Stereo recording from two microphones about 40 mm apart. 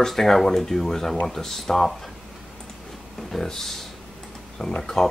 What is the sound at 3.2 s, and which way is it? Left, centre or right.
Speech, centre.